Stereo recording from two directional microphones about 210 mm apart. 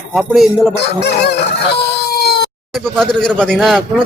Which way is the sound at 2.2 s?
50° left (ahead or behind).